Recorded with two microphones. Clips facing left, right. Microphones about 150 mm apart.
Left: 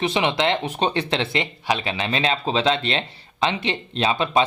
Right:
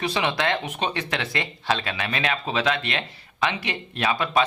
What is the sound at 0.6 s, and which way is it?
Speech, 30° left (ahead or behind).